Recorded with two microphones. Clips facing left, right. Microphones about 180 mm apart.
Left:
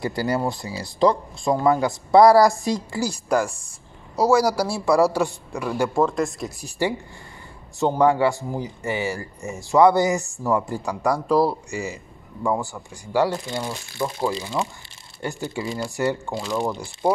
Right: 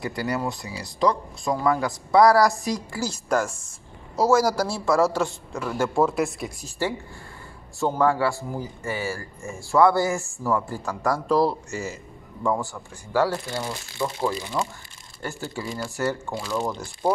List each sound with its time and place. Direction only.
0.0 s speech: 30° left (ahead or behind)
3.0 s speech: 10° left (ahead or behind)
4.6 s speech: 10° left (ahead or behind)
5.9 s speech: 5° right (ahead or behind)
6.8 s speech: 15° left (ahead or behind)